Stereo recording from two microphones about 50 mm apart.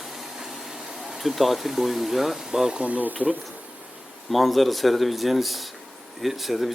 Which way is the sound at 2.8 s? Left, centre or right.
Right.